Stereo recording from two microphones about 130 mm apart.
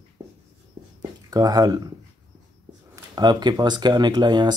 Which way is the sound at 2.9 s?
30° right (ahead or behind).